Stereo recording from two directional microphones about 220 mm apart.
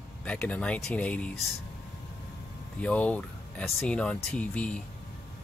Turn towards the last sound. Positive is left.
turn(degrees=5)  # may be behind; listen again after turning